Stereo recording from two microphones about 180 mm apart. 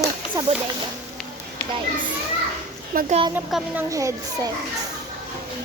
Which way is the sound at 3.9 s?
15° right (ahead or behind).